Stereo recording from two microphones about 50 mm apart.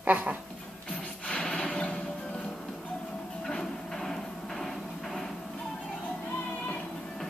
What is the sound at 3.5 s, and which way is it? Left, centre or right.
Music, centre.